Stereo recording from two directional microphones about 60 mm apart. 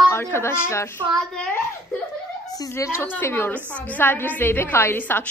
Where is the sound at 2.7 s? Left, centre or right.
Left.